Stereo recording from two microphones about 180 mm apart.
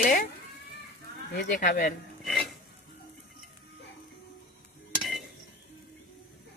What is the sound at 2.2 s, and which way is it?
Dishes, centre (ahead or behind).